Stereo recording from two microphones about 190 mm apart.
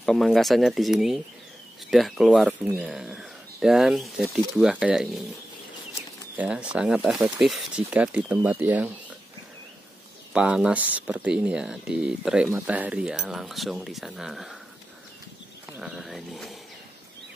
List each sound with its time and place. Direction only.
0.0 s speech: centre (ahead or behind)
6.3 s speech: 5° right (ahead or behind)
10.3 s speech: 5° right (ahead or behind)
15.8 s speech: centre (ahead or behind)